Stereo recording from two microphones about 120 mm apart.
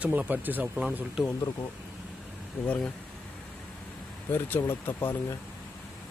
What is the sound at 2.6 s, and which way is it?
Speech, 15° left (ahead or behind).